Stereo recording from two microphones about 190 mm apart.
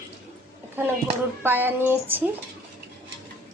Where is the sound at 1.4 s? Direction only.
10° right (ahead or behind).